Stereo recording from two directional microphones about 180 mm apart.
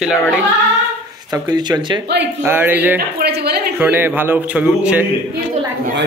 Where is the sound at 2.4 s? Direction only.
10° right (ahead or behind).